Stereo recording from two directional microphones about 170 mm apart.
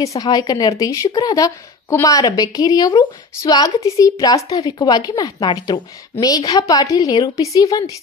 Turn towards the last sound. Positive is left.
turn(degrees=20)  # may be behind; listen again after turning